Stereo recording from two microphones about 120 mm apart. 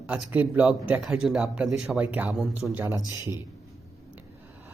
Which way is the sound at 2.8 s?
30° right (ahead or behind).